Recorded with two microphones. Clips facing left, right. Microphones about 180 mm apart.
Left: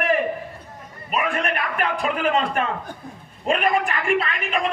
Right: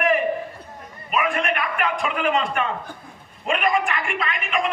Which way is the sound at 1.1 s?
35° left (ahead or behind).